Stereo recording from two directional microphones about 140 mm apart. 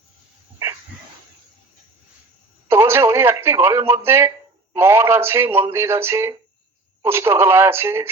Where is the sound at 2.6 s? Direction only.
15° right (ahead or behind).